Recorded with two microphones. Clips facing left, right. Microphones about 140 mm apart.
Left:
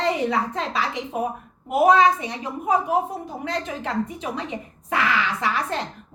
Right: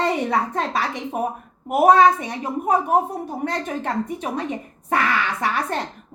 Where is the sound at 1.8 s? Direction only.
50° right (ahead or behind).